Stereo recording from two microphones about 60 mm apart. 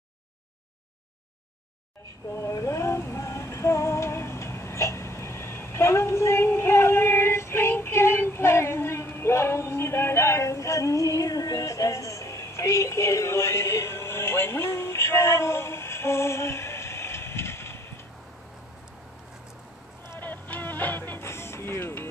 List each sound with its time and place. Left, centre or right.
2.3 s female singing: left
20.2 s music: left